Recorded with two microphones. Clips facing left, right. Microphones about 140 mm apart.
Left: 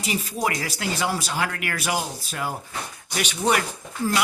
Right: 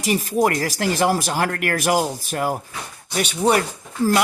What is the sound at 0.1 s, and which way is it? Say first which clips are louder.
Speech: right 7 dB; 50° right (ahead or behind).